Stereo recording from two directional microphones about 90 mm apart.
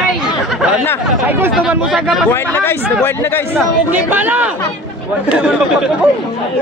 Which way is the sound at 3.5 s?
20° right (ahead or behind).